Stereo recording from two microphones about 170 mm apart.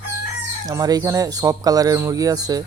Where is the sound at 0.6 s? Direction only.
20° right (ahead or behind).